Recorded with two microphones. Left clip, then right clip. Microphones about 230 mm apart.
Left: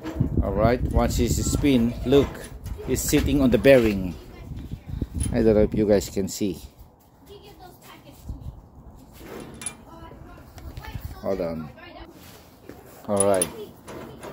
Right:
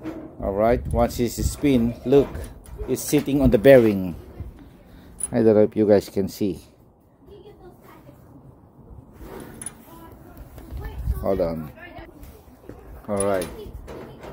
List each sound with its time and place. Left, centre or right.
0.4 s speech: centre
5.3 s speech: centre
11.2 s speech: right
13.0 s speech: centre